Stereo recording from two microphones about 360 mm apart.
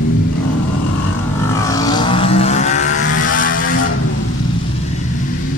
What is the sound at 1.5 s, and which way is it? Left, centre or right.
Vehicle, centre.